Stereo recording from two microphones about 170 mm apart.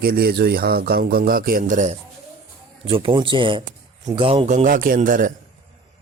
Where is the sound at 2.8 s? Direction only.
30° right (ahead or behind).